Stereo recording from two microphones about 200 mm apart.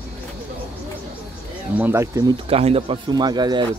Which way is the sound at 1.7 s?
10° right (ahead or behind).